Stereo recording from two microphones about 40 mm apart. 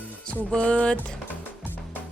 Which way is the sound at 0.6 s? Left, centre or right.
Left.